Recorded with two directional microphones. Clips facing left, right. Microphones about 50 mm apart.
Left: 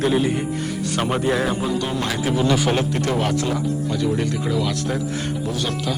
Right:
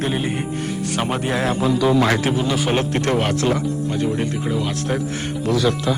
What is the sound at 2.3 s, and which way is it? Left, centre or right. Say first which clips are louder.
Speech: left 2 dB; centre.